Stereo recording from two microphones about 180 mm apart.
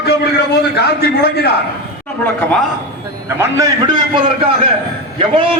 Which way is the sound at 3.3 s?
15° right (ahead or behind).